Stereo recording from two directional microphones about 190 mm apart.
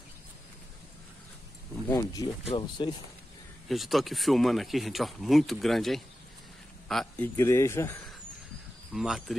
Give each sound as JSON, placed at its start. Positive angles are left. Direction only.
{"t": 1.9, "sound": "speech", "side_deg": 15}
{"t": 3.6, "sound": "a man's voice", "side_deg": 0}
{"t": 7.3, "sound": "speech", "side_deg": 15}
{"t": 8.9, "sound": "speech", "side_deg": 0}